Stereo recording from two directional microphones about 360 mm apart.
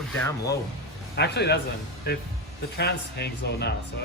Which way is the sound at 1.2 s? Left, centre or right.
Left.